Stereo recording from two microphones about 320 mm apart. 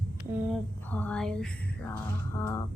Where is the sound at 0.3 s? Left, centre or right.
Centre.